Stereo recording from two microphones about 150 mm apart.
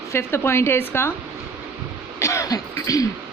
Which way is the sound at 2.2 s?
20° left (ahead or behind).